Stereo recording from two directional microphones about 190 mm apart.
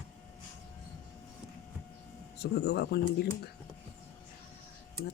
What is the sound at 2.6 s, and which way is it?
Speech, 60° left (ahead or behind).